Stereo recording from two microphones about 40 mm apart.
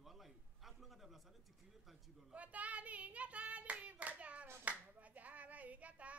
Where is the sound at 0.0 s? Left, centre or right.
Centre.